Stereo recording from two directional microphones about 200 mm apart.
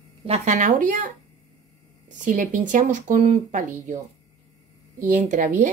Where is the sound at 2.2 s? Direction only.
40° right (ahead or behind).